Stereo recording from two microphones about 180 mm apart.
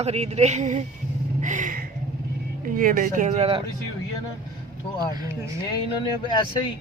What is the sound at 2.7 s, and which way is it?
Speech, 50° right (ahead or behind).